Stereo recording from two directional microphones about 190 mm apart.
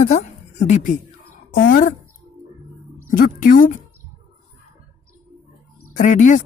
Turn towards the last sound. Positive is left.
turn(degrees=40)  # may be behind; listen again after turning